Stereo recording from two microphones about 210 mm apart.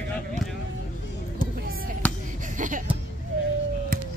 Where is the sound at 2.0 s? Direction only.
5° left (ahead or behind).